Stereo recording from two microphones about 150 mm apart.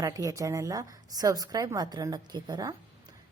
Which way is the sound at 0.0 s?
25° right (ahead or behind).